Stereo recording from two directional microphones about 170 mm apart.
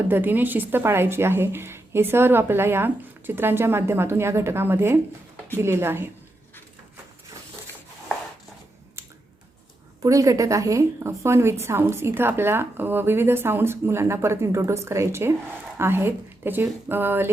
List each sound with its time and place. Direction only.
0.1 s a woman's voice: 10° right (ahead or behind)
10.0 s a woman's voice: 20° right (ahead or behind)